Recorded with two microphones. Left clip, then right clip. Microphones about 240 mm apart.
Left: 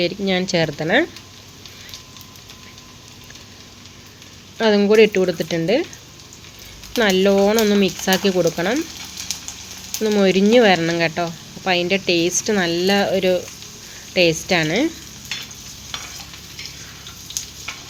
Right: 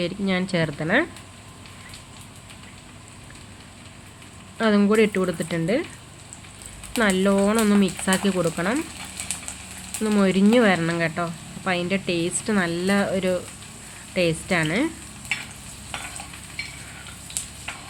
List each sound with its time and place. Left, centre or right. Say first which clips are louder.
0.0 s speech: left 6 dB; centre
4.5 s speech: left 6 dB; centre
7.0 s speech: left 5 dB; centre
10.0 s speech: left 5 dB; centre